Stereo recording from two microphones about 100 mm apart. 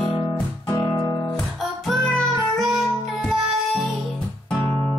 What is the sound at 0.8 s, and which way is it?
Guitar, 40° left (ahead or behind).